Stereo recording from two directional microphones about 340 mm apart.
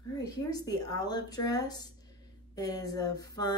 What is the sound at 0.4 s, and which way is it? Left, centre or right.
Speech, centre.